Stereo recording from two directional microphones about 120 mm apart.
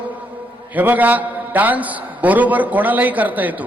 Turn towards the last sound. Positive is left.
turn(degrees=-15)  # may be behind; listen again after turning